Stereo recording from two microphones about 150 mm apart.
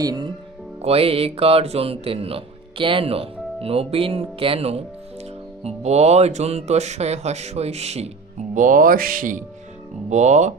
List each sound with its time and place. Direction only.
0.0 s speech: 25° right (ahead or behind)
0.8 s speech: 40° right (ahead or behind)
8.5 s speech: 60° right (ahead or behind)
10.0 s speech: 50° right (ahead or behind)